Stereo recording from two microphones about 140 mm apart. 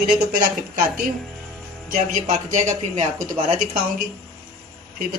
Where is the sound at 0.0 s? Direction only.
75° right (ahead or behind).